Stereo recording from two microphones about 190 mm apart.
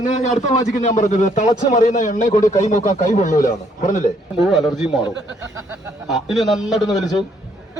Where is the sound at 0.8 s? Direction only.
40° left (ahead or behind).